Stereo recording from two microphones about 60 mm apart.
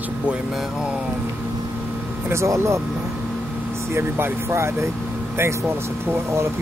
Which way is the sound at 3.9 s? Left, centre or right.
Right.